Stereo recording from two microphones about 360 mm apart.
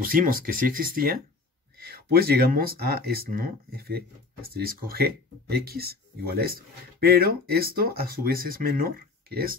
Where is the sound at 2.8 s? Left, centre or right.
Right.